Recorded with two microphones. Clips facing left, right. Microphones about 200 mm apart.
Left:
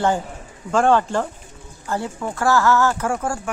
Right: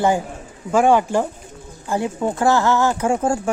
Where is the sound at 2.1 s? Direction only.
20° right (ahead or behind).